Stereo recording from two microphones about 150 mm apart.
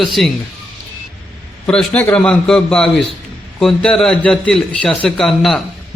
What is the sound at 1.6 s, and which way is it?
A man's voice, 5° left (ahead or behind).